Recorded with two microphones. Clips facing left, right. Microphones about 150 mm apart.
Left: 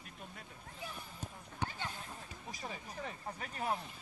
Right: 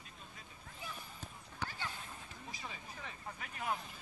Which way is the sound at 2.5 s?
40° left (ahead or behind).